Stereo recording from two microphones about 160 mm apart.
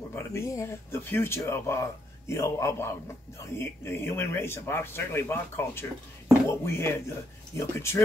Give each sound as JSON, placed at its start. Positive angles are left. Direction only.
{"t": 0.1, "sound": "speech", "side_deg": 15}